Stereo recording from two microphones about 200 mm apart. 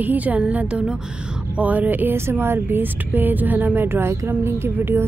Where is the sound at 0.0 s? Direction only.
10° right (ahead or behind).